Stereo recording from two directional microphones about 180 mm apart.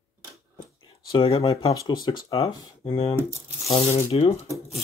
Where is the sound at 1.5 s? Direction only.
20° left (ahead or behind).